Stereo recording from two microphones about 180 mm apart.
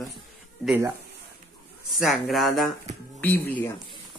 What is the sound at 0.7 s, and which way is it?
Speech, 10° right (ahead or behind).